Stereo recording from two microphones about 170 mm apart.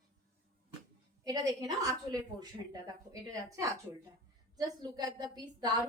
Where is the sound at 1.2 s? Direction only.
20° right (ahead or behind).